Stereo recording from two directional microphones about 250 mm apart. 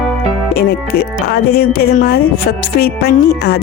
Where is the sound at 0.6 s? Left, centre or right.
Left.